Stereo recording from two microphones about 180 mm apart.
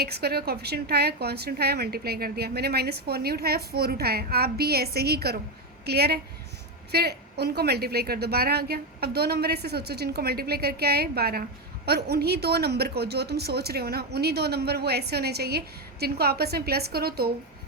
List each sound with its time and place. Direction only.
0.0 s a woman's voice: 60° right (ahead or behind)